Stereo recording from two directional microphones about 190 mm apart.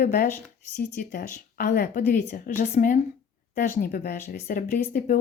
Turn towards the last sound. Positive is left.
turn(degrees=45)  # may be behind; listen again after turning